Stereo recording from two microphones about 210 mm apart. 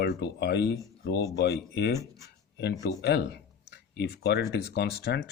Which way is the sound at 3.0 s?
50° left (ahead or behind).